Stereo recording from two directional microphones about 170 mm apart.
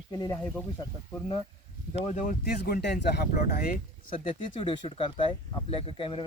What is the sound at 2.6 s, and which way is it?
Speech, 75° left (ahead or behind).